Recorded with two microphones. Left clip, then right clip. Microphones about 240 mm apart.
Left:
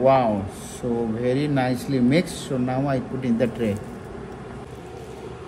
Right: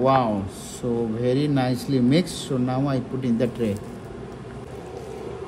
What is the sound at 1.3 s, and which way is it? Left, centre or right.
Speech, right.